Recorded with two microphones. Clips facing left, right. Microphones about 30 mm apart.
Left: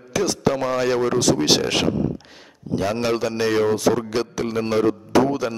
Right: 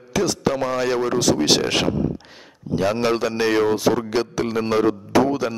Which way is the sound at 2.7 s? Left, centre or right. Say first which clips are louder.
Right 2 dB; centre.